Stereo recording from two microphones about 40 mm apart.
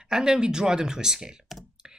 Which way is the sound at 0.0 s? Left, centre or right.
Centre.